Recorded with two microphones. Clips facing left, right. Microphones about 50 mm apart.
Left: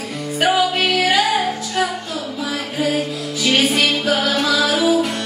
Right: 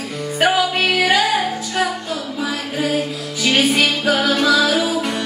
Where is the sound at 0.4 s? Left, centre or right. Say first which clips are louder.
Even; centre.